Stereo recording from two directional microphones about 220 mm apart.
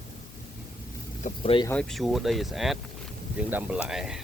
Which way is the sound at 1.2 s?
25° left (ahead or behind).